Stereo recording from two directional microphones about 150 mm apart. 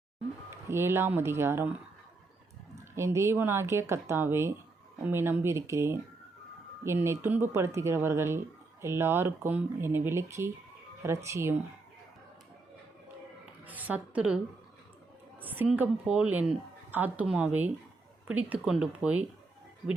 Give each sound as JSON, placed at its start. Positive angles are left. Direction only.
{"t": 0.7, "sound": "a woman's voice", "side_deg": -15}
{"t": 2.9, "sound": "a woman's voice", "side_deg": -20}
{"t": 13.7, "sound": "a woman's voice", "side_deg": -10}
{"t": 15.4, "sound": "a woman's voice", "side_deg": -10}